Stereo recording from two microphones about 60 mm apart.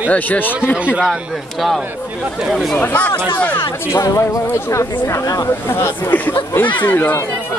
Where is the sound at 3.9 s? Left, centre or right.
Left.